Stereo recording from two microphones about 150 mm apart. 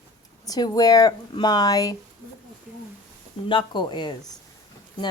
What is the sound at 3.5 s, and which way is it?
Speech, 30° left (ahead or behind).